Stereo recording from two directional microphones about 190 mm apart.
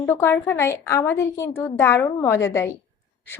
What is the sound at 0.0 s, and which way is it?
Speech, 10° left (ahead or behind).